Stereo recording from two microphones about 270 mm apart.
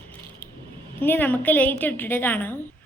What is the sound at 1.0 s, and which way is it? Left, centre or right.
A woman's voice, centre.